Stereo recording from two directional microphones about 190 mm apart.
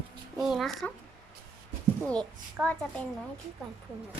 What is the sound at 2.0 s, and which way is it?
A child's voice, centre (ahead or behind).